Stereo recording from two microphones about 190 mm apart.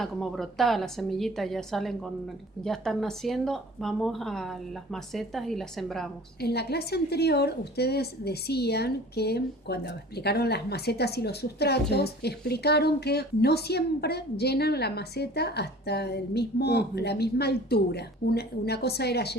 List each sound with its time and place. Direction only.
0.0 s a woman's voice: centre (ahead or behind)
6.4 s a woman's voice: 60° left (ahead or behind)